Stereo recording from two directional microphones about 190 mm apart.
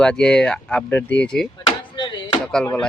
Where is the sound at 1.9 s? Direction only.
25° left (ahead or behind).